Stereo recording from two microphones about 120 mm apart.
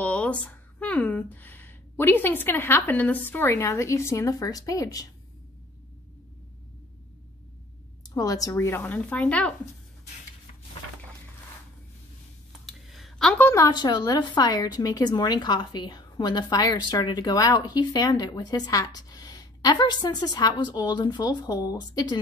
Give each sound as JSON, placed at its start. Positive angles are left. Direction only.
{"t": 0.0, "sound": "speech", "side_deg": 10}
{"t": 8.1, "sound": "speech", "side_deg": 30}
{"t": 12.6, "sound": "a sound", "side_deg": 0}
{"t": 13.5, "sound": "a woman's voice", "side_deg": 30}